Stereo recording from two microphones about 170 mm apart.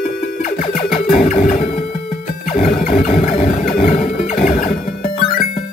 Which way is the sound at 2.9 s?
40° left (ahead or behind).